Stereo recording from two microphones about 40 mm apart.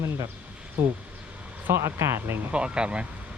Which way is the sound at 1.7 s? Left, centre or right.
Right.